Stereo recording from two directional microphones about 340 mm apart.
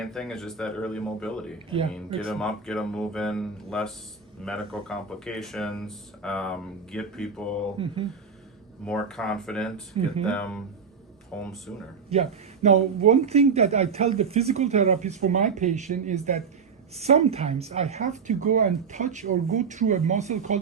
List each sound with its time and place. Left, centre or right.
0.0 s speech: centre
8.8 s speech: centre
12.1 s speech: centre